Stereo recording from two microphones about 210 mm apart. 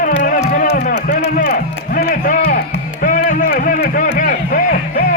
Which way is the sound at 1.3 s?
40° left (ahead or behind).